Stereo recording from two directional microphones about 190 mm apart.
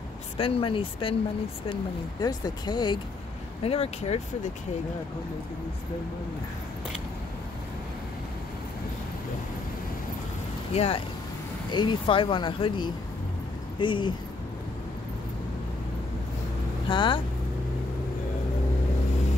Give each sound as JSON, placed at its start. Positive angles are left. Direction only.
{"t": 0.4, "sound": "speech", "side_deg": 30}
{"t": 10.7, "sound": "speech", "side_deg": 30}
{"t": 16.9, "sound": "speech", "side_deg": 25}